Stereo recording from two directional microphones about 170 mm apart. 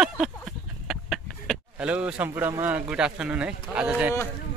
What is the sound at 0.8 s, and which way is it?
Speech, centre (ahead or behind).